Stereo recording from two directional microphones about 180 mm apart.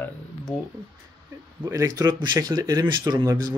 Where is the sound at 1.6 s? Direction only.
20° right (ahead or behind).